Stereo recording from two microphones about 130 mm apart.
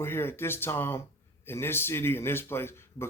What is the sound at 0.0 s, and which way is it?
Speech, 15° left (ahead or behind).